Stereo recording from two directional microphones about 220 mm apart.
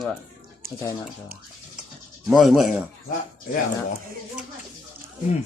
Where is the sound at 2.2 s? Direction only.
Centre (ahead or behind).